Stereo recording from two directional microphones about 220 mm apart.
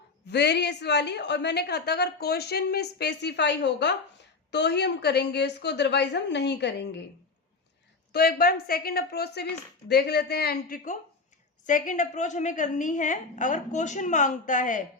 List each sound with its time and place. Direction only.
0.3 s a woman's voice: 50° left (ahead or behind)
8.1 s a woman's voice: 45° left (ahead or behind)